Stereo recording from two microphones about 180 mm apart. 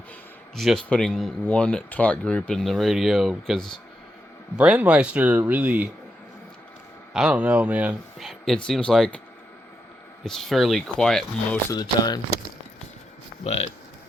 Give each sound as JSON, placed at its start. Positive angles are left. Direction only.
{"t": 0.5, "sound": "speech", "side_deg": 0}
{"t": 7.1, "sound": "speech", "side_deg": -5}
{"t": 8.3, "sound": "speech", "side_deg": 5}
{"t": 10.2, "sound": "speech", "side_deg": 0}
{"t": 11.7, "sound": "speech", "side_deg": 20}
{"t": 13.4, "sound": "speech", "side_deg": 35}